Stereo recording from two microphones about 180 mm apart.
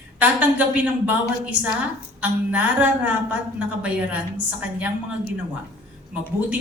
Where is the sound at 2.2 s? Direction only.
10° right (ahead or behind).